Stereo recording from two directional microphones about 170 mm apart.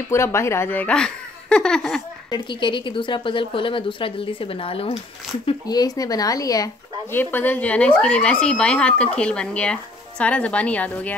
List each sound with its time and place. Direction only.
0.1 s speech: 15° left (ahead or behind)
2.3 s a woman's voice: 30° left (ahead or behind); by 11.1 s 10° left (ahead or behind)